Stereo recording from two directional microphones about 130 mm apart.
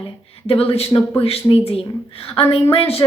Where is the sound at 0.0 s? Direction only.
50° left (ahead or behind).